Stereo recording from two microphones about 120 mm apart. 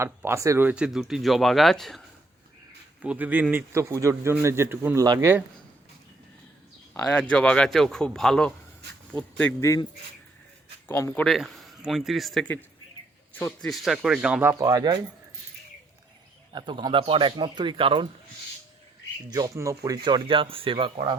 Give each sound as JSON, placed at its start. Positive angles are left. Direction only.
{"t": 0.0, "sound": "a man's voice", "side_deg": -20}
{"t": 0.7, "sound": "speech", "side_deg": -5}
{"t": 3.0, "sound": "a man's voice", "side_deg": -10}
{"t": 7.1, "sound": "speech", "side_deg": 10}
{"t": 9.6, "sound": "a man's voice", "side_deg": 25}
{"t": 10.8, "sound": "speech", "side_deg": 20}
{"t": 11.1, "sound": "speech", "side_deg": 5}
{"t": 13.6, "sound": "speech", "side_deg": 0}
{"t": 14.4, "sound": "speech", "side_deg": -30}
{"t": 16.5, "sound": "speech", "side_deg": -40}
{"t": 19.3, "sound": "speech", "side_deg": -30}